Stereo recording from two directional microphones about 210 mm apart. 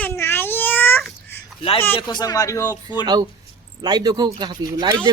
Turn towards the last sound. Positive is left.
turn(degrees=-20)  # may be behind; listen again after turning